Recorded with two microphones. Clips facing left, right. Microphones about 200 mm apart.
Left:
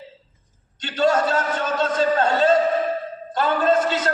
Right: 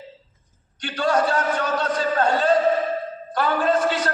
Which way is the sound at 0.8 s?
25° left (ahead or behind).